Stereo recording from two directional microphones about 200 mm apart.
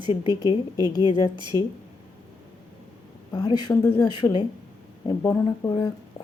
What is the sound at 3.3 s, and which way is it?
Speech, 20° left (ahead or behind).